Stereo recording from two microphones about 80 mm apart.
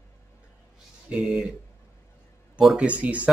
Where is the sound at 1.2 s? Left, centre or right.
Centre.